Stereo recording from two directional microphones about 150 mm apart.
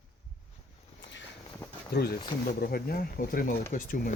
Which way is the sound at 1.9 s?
90° left.